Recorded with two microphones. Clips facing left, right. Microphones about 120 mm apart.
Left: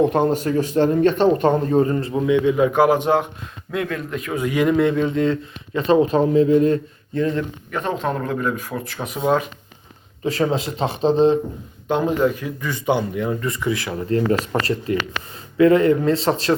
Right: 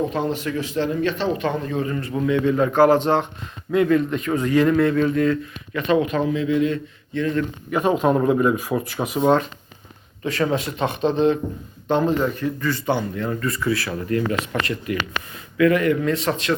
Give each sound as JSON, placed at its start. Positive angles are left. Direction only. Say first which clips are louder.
{"t": 0.0, "sound": "speech", "louder": "left 6 dB", "side_deg": 55}
{"t": 2.2, "sound": "speech", "louder": "left 2 dB", "side_deg": 15}
{"t": 3.7, "sound": "speech", "louder": "right 7 dB", "side_deg": 0}
{"t": 7.7, "sound": "speech", "louder": "right 6 dB", "side_deg": -10}
{"t": 10.2, "sound": "speech", "louder": "left 2 dB", "side_deg": 30}
{"t": 11.9, "sound": "speech", "louder": "left 1 dB", "side_deg": 10}